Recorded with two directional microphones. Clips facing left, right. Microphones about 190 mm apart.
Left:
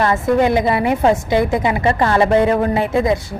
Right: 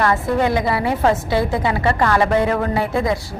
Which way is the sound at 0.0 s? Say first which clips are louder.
Left 3 dB; 20° left (ahead or behind).